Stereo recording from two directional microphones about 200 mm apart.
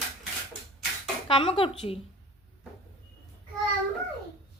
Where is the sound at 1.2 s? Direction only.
25° left (ahead or behind).